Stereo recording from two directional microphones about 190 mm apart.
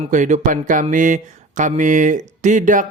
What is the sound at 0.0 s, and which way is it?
Speech, 40° right (ahead or behind).